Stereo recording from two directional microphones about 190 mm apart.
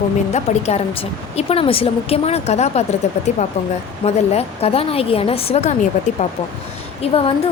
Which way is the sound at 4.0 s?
35° left (ahead or behind).